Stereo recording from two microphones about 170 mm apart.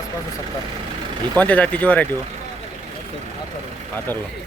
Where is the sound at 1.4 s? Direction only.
10° left (ahead or behind).